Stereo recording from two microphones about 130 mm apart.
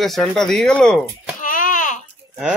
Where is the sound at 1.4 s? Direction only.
90° left.